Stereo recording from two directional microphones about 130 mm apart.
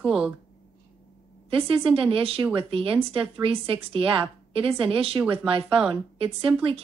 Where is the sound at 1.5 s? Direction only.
45° right (ahead or behind).